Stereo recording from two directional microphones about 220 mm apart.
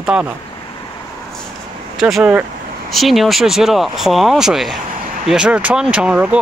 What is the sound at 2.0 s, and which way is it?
Speech, centre (ahead or behind).